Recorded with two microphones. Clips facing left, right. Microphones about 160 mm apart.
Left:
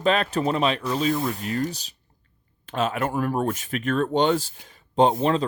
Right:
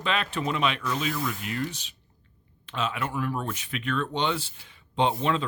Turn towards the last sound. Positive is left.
turn(degrees=40)  # may be behind; listen again after turning